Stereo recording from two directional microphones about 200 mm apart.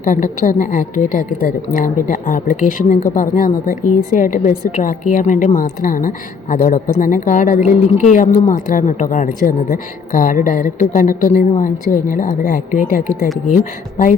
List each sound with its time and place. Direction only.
0.0 s a woman's voice: 40° left (ahead or behind)